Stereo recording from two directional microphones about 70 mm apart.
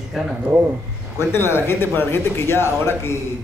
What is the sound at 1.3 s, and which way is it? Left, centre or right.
Speech, left.